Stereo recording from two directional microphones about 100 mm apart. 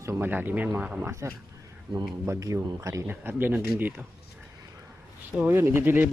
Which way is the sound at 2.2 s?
30° right (ahead or behind).